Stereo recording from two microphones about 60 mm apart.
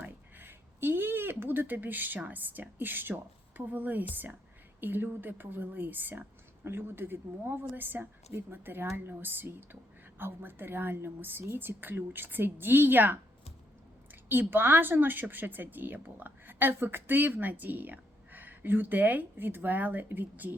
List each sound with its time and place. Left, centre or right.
0.0 s speech: right
14.3 s speech: right